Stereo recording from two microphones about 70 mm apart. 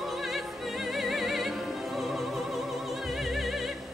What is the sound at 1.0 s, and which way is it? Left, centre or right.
Music, centre.